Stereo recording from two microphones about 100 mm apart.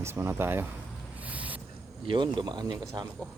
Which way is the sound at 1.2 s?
15° right (ahead or behind).